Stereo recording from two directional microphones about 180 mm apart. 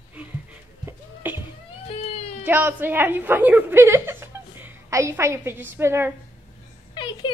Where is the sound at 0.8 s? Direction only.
10° right (ahead or behind).